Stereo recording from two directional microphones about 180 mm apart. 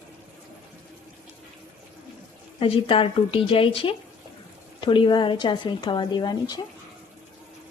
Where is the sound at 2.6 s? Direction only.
30° left (ahead or behind).